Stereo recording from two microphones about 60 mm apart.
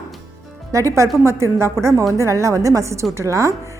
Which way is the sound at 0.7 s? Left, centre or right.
Right.